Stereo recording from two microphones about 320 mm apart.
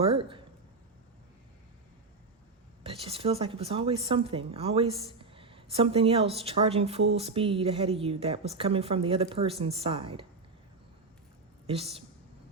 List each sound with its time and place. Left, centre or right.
0.0 s speech: centre
2.8 s a woman's voice: centre
11.6 s a woman's voice: centre